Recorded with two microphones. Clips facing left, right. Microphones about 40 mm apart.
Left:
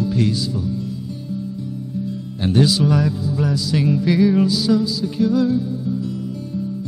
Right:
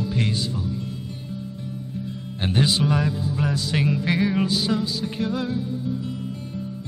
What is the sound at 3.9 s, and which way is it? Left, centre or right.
Music, right.